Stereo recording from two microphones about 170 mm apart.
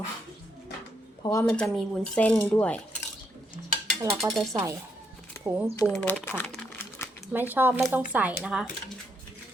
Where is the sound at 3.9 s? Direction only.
Centre (ahead or behind).